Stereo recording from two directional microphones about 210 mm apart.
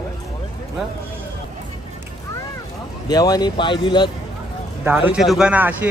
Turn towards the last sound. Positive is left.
turn(degrees=-10)  # may be behind; listen again after turning